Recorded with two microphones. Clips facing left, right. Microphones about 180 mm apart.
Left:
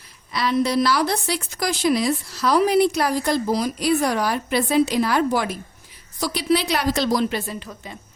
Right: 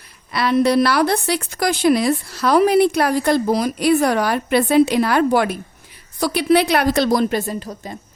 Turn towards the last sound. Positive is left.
turn(degrees=-40)  # may be behind; listen again after turning